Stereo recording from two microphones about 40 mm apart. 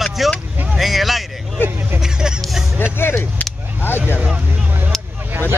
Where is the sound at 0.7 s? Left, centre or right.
Centre.